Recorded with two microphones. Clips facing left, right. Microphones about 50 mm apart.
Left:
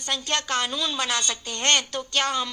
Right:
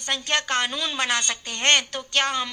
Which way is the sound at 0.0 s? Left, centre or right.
Right.